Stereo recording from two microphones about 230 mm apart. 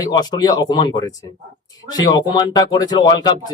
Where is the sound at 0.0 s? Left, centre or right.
Centre.